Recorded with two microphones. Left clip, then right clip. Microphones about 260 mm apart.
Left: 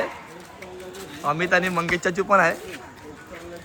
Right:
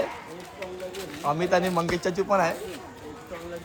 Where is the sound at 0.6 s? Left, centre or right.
Centre.